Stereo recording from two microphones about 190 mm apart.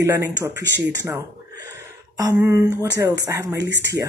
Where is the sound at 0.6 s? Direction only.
65° right (ahead or behind).